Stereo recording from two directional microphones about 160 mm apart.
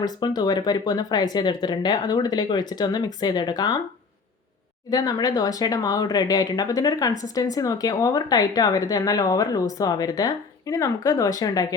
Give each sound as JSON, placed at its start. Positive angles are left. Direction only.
{"t": 0.0, "sound": "speech", "side_deg": 25}
{"t": 4.9, "sound": "speech", "side_deg": 25}